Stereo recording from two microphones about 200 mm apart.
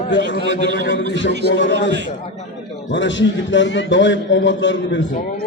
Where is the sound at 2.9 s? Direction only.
65° left (ahead or behind).